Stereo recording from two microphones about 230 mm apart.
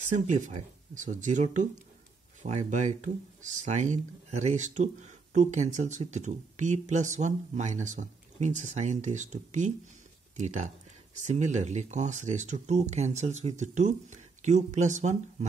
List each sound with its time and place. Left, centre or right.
0.1 s speech: right